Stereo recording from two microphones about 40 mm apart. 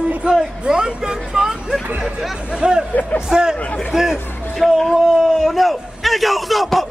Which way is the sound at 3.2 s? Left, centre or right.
Centre.